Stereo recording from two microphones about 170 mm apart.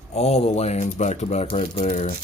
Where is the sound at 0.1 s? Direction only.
40° left (ahead or behind).